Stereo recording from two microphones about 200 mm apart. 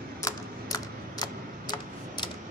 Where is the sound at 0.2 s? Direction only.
20° left (ahead or behind).